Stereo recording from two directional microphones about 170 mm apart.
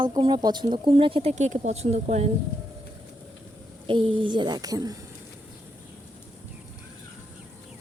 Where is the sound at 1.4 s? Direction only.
45° right (ahead or behind).